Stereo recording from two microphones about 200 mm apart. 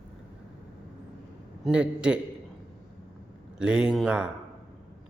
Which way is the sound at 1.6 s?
5° right (ahead or behind).